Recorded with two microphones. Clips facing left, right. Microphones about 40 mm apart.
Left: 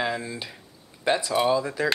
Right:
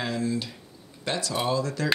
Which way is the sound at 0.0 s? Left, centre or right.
Centre.